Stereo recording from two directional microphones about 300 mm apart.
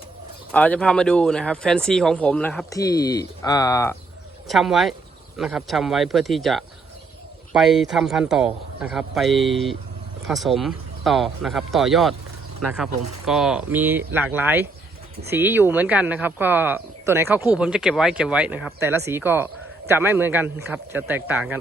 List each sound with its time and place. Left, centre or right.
0.5 s speech: centre
4.4 s speech: centre